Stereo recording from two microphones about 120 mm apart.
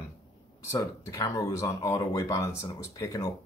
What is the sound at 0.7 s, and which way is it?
A man's voice, 25° left (ahead or behind).